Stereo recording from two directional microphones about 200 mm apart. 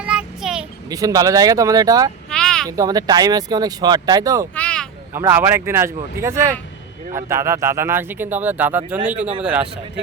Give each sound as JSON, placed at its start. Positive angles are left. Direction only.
{"t": 0.0, "sound": "child singing", "side_deg": -5}
{"t": 0.9, "sound": "speech", "side_deg": -20}
{"t": 2.3, "sound": "a sound", "side_deg": 5}
{"t": 2.6, "sound": "speech", "side_deg": -15}
{"t": 4.5, "sound": "a sound", "side_deg": 5}
{"t": 5.1, "sound": "a man's voice", "side_deg": -10}